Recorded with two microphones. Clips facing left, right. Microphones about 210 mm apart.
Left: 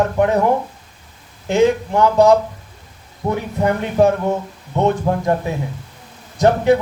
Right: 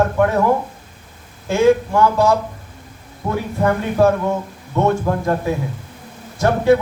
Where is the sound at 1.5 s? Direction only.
20° left (ahead or behind).